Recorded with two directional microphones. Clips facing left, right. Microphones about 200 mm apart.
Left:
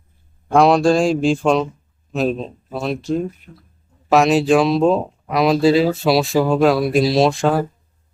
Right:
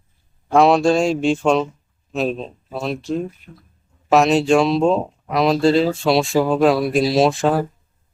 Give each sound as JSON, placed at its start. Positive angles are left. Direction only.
{"t": 0.4, "sound": "speech", "side_deg": 0}
{"t": 3.4, "sound": "speech", "side_deg": 50}
{"t": 4.1, "sound": "speech", "side_deg": 0}